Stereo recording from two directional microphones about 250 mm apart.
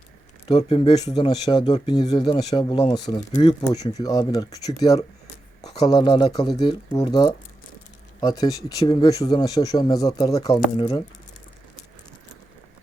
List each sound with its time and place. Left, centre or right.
0.4 s speech: left